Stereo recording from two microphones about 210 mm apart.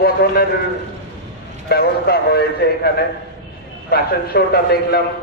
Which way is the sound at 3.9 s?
45° left (ahead or behind).